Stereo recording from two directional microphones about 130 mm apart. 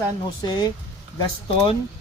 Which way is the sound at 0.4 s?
35° left (ahead or behind).